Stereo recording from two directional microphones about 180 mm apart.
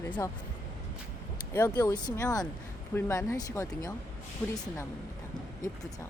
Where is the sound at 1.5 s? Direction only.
15° left (ahead or behind).